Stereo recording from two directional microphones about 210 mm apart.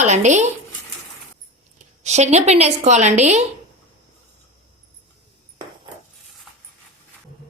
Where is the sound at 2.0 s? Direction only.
30° right (ahead or behind).